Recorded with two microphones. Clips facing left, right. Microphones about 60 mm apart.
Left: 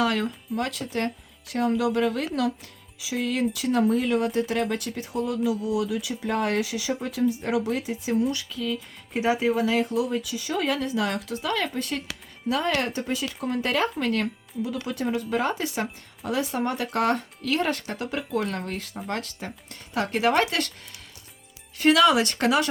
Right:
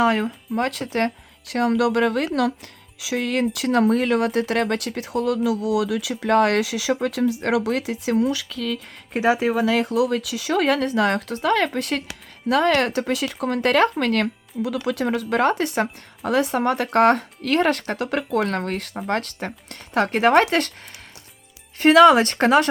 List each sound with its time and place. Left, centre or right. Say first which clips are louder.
0.0 s speech: right 5 dB; right
0.5 s speech: right 6 dB; right
21.8 s speech: right 6 dB; right